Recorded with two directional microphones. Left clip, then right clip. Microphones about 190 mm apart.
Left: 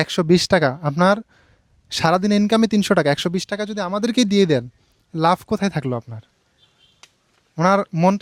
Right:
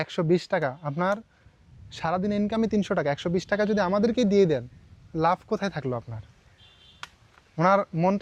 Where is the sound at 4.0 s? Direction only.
40° left (ahead or behind).